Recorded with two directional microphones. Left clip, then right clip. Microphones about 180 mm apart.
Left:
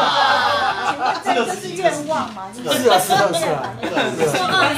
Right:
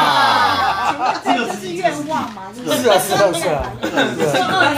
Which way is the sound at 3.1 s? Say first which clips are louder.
Right 1 dB; 35° left (ahead or behind).